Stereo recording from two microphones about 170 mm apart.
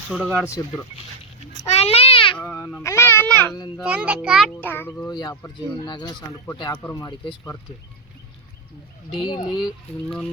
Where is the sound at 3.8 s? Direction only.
5° right (ahead or behind).